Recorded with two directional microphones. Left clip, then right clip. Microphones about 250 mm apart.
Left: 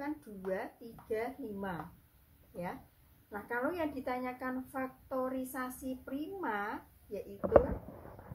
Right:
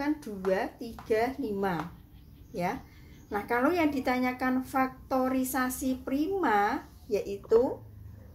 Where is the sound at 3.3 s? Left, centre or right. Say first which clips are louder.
Right 9 dB; right.